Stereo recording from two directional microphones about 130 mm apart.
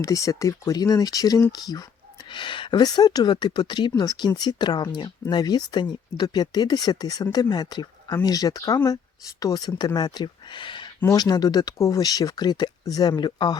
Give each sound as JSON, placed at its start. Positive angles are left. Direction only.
{"t": 0.0, "sound": "speech", "side_deg": 25}